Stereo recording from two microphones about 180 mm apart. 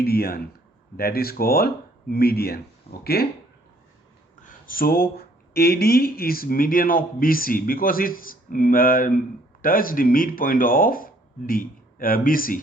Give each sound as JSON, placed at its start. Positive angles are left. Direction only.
{"t": 0.0, "sound": "speech", "side_deg": 60}
{"t": 4.4, "sound": "speech", "side_deg": 50}